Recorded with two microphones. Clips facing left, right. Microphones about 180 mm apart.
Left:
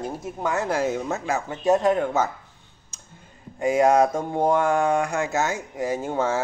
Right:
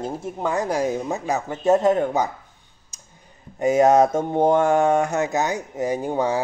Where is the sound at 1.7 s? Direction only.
25° right (ahead or behind).